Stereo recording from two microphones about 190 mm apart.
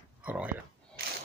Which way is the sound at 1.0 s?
55° right (ahead or behind).